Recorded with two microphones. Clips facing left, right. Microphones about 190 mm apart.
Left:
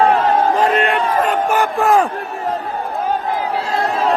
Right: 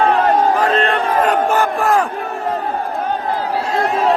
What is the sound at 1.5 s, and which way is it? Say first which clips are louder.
Battle cry: left 1 dB; 15° left (ahead or behind).